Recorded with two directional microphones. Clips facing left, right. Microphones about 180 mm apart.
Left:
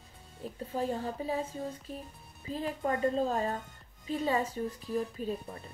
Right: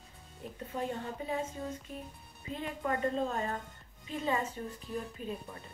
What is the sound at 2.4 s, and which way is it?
A woman's voice, 35° left (ahead or behind).